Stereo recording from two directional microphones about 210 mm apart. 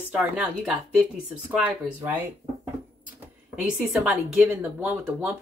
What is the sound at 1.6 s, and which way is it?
Speech, 10° right (ahead or behind).